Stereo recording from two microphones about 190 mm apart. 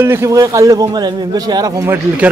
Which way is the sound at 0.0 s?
15° right (ahead or behind).